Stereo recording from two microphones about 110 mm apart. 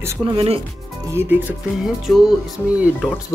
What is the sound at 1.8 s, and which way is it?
Music, 5° right (ahead or behind).